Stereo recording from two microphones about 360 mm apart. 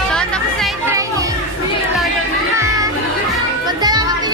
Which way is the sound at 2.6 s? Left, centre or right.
Centre.